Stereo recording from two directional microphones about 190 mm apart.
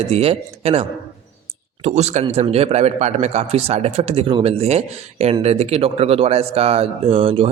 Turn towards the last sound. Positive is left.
turn(degrees=-30)  # may be behind; listen again after turning